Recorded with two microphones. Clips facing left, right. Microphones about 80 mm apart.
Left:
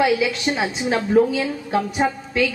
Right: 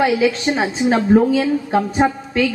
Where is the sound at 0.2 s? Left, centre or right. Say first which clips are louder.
Right 4 dB; right.